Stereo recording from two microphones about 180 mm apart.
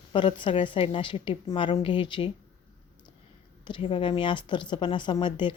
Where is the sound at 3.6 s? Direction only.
30° left (ahead or behind).